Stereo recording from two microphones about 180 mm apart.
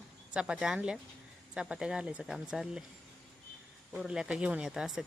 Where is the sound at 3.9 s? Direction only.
5° right (ahead or behind).